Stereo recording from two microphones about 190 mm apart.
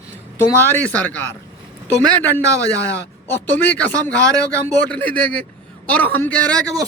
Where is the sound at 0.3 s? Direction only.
10° left (ahead or behind).